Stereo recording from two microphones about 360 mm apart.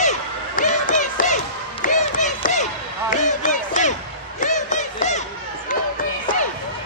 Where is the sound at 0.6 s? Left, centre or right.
Left.